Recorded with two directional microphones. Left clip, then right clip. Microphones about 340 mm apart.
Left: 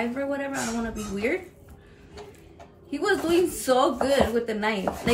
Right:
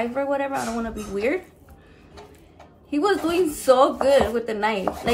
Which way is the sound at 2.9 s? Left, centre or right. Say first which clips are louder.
Right 2 dB; centre.